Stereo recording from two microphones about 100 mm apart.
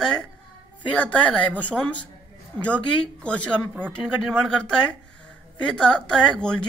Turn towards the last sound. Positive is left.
turn(degrees=10)  # may be behind; listen again after turning